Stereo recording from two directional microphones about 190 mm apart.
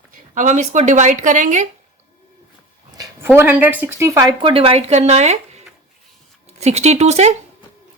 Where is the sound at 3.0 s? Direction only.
10° right (ahead or behind); by 7.3 s 35° right (ahead or behind).